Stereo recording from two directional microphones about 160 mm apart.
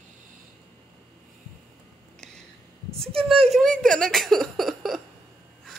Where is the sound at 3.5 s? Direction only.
Centre (ahead or behind).